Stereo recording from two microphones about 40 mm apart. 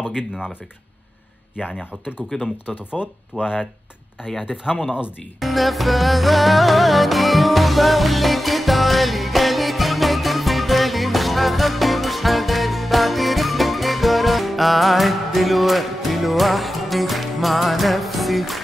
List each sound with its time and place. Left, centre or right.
2.2 s speech: centre
2.6 s speech: left
3.0 s speech: centre
5.4 s music: centre